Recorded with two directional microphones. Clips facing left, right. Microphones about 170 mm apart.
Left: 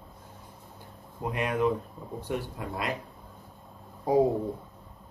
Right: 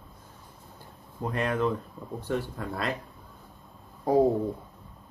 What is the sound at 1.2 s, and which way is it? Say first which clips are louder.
Speech: even; 15° left (ahead or behind).